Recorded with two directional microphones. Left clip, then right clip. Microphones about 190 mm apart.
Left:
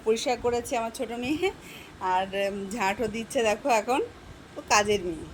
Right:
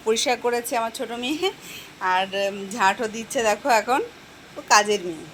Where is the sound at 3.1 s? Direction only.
40° left (ahead or behind).